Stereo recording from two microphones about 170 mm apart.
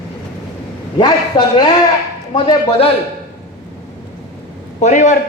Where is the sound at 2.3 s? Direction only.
25° left (ahead or behind).